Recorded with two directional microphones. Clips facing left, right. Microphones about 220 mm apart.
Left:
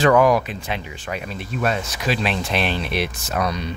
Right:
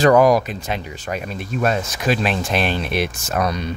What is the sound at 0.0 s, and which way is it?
Speech, 40° right (ahead or behind).